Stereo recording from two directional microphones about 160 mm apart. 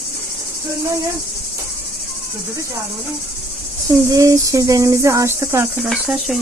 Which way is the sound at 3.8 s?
20° right (ahead or behind).